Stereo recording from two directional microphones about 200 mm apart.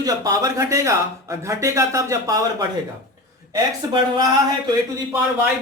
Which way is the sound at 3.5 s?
20° right (ahead or behind).